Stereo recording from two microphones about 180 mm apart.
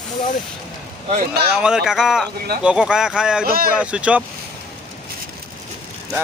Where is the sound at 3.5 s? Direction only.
55° right (ahead or behind).